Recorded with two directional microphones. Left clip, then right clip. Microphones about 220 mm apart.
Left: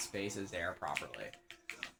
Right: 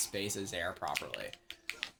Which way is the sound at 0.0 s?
55° right (ahead or behind).